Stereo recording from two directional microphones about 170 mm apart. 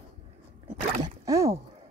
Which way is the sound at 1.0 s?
20° right (ahead or behind).